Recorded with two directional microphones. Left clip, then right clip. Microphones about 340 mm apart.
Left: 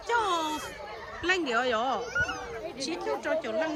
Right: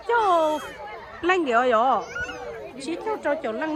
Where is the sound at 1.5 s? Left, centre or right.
Centre.